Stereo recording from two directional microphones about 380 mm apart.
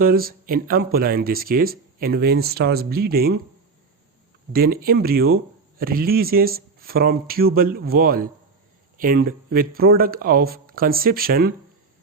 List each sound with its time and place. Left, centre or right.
0.0 s speech: right
4.5 s speech: right